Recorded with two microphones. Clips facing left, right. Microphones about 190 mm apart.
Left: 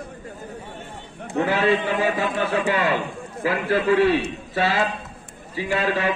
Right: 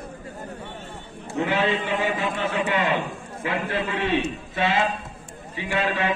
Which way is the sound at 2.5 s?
35° left (ahead or behind).